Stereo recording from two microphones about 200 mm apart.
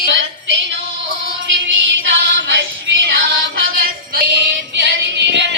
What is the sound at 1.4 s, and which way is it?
Music, 65° right (ahead or behind).